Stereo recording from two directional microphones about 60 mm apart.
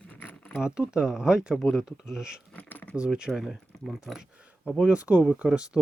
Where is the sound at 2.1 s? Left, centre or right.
Centre.